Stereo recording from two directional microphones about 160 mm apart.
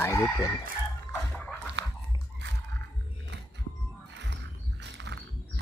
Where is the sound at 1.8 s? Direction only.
90° right.